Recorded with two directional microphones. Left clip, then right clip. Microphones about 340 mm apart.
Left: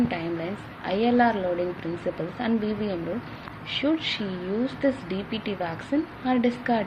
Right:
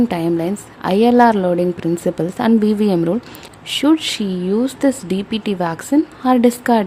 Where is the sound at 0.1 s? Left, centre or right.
Right.